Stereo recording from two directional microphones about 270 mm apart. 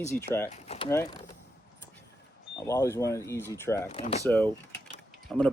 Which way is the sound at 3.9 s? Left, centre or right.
Left.